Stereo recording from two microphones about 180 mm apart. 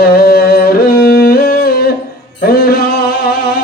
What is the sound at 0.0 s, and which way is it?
Music, 60° left (ahead or behind).